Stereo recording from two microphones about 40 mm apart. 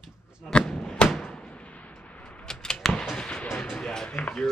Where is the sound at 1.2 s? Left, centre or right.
Left.